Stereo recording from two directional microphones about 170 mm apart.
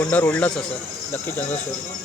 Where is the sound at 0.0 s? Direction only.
10° left (ahead or behind).